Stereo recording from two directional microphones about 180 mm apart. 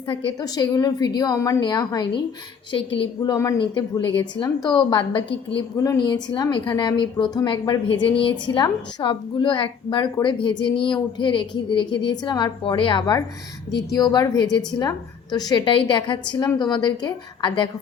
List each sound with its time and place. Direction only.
0.1 s a woman's voice: 30° left (ahead or behind)
3.3 s speech: 15° left (ahead or behind)
3.6 s a woman's voice: 25° left (ahead or behind)